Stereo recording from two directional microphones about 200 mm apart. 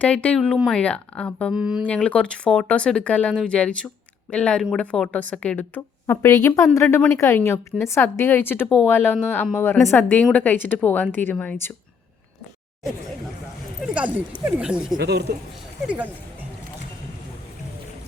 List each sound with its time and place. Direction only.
0.0 s speech: 5° left (ahead or behind)
1.9 s a woman's voice: 5° left (ahead or behind)
13.8 s speech: 5° right (ahead or behind)
14.9 s speech: 55° right (ahead or behind)